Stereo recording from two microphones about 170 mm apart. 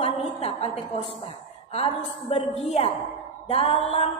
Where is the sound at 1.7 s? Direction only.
35° left (ahead or behind).